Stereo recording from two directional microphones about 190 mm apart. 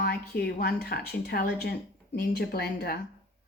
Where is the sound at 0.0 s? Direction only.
55° left (ahead or behind).